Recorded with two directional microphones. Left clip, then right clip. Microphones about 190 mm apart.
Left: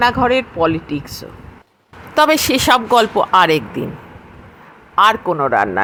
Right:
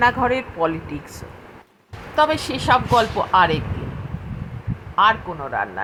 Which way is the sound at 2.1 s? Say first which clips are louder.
Left 6 dB; 45° left (ahead or behind).